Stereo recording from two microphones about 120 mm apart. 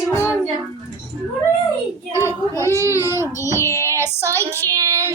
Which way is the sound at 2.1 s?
20° right (ahead or behind).